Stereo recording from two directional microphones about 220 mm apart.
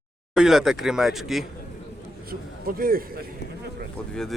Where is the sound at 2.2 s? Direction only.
40° right (ahead or behind).